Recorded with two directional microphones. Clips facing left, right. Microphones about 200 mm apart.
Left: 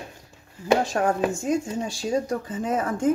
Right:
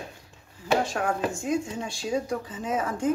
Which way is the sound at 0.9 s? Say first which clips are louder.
Left 4 dB; 40° left (ahead or behind).